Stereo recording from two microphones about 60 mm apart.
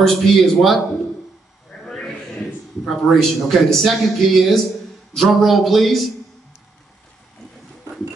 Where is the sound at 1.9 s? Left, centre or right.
Centre.